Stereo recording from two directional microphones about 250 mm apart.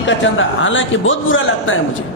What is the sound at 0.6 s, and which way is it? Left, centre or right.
Speech, left.